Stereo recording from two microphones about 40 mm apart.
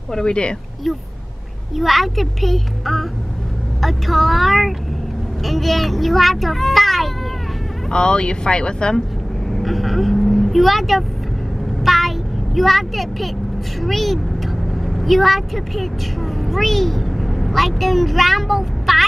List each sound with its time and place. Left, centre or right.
0.1 s speech: left
0.8 s a child's voice: centre
7.9 s speech: left
9.5 s vehicle: centre
11.8 s a sound: centre
12.5 s a child's voice: centre